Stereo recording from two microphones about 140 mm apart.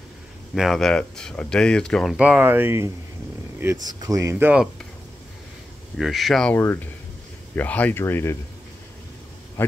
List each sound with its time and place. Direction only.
0.6 s speech: centre (ahead or behind)
5.9 s speech: centre (ahead or behind)
6.5 s speech: 15° left (ahead or behind)
9.6 s speech: 15° left (ahead or behind)